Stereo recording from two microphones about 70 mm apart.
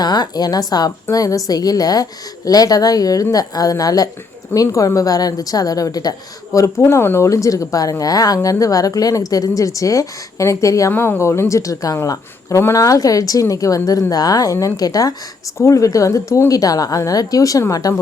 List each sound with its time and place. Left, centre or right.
0.0 s a woman's voice: left
1.1 s a woman's voice: left
6.7 s speech: left
7.3 s a woman's voice: left
10.9 s a woman's voice: left
15.5 s a woman's voice: left